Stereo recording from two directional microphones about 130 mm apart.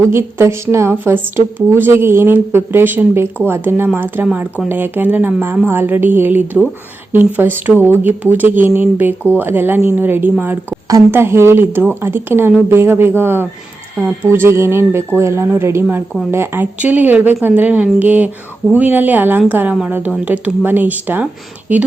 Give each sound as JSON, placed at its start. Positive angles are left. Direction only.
{"t": 0.1, "sound": "a woman's voice", "side_deg": -20}